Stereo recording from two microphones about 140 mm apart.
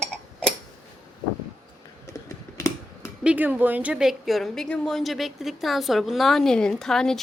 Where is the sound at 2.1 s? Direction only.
20° left (ahead or behind).